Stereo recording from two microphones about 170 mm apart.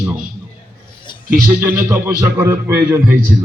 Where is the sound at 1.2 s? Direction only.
15° right (ahead or behind).